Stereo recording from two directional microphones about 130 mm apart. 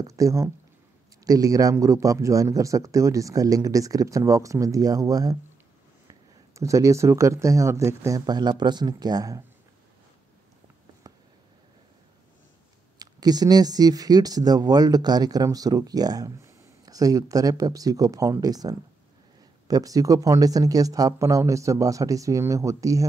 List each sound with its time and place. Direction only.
0.0 s speech: 25° right (ahead or behind)
6.5 s speech: 25° right (ahead or behind)
13.0 s speech: 30° right (ahead or behind)